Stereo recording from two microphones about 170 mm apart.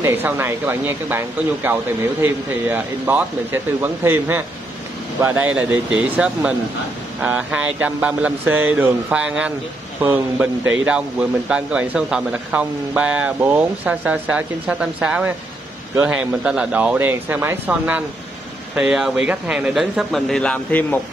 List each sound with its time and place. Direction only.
0.0 s a man's voice: 15° right (ahead or behind); by 21.0 s 10° left (ahead or behind)